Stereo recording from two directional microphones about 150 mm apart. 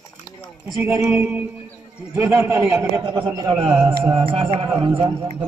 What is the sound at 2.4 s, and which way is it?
Speech, 15° right (ahead or behind).